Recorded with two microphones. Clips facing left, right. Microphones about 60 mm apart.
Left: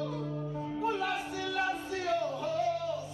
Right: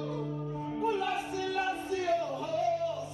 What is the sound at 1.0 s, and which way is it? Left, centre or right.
Music, right.